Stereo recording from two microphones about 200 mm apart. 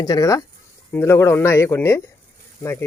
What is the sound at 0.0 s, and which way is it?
Speech, 15° left (ahead or behind).